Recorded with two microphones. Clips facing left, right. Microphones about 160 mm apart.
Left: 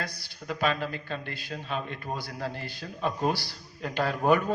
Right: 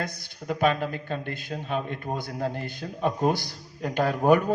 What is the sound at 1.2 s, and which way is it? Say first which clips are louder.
Speech: right 5 dB; 50° right (ahead or behind).